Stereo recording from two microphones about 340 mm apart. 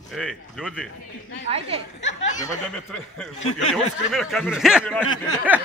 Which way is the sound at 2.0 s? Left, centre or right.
Left.